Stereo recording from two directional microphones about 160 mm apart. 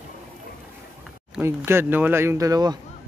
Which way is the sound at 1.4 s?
15° right (ahead or behind).